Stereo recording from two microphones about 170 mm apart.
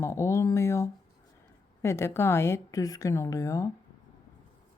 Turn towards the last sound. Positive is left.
turn(degrees=20)  # may be behind; listen again after turning